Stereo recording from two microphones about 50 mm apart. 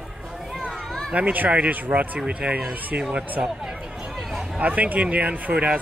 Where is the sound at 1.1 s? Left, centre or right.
Right.